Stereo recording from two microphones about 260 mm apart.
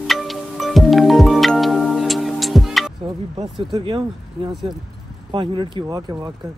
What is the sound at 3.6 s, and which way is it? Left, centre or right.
Speech, centre.